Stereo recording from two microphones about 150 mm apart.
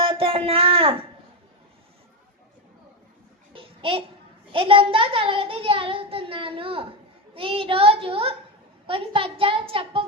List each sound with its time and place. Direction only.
0.0 s speech: 40° right (ahead or behind)
3.5 s babbling: 35° right (ahead or behind)
4.5 s speech: 35° right (ahead or behind)